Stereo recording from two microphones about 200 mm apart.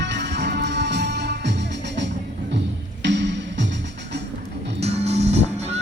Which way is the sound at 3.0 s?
60° right (ahead or behind).